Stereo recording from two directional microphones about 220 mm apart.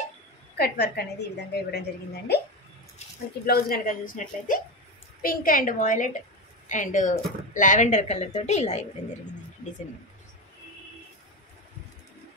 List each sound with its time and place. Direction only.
0.6 s a woman's voice: 45° left (ahead or behind)
3.4 s a woman's voice: 45° left (ahead or behind)